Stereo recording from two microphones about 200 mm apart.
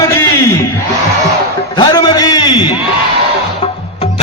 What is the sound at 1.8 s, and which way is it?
Speech, 20° left (ahead or behind).